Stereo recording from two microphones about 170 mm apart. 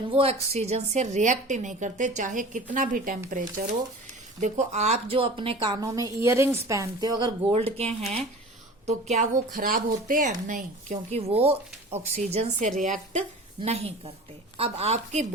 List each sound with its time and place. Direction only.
0.1 s a woman's voice: 35° right (ahead or behind); by 3.2 s 50° right (ahead or behind)
4.4 s a woman's voice: 45° right (ahead or behind); by 7.3 s 25° right (ahead or behind)
7.8 s a woman's voice: 40° right (ahead or behind)
9.5 s a woman's voice: 55° right (ahead or behind)
11.3 s a woman's voice: 35° right (ahead or behind)
13.6 s a woman's voice: 35° right (ahead or behind)